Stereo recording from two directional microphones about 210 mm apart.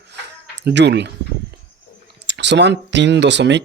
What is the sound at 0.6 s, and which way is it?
Speech, 55° right (ahead or behind).